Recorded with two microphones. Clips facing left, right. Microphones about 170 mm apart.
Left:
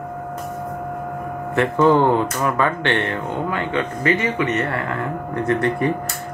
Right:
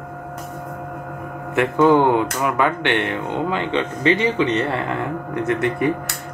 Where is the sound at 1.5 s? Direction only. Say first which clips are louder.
Right 1 dB; 15° right (ahead or behind).